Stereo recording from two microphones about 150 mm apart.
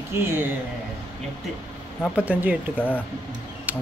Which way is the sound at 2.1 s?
10° right (ahead or behind).